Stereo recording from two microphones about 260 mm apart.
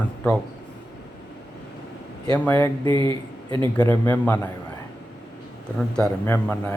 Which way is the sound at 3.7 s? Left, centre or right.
Centre.